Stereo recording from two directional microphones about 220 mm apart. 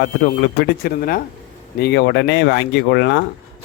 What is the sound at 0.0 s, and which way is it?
Speech, 50° left (ahead or behind).